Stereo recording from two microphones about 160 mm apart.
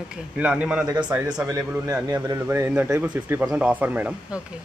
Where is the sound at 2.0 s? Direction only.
25° right (ahead or behind).